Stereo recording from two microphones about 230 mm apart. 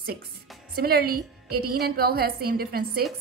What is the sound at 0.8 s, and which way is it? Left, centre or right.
A woman's voice, right.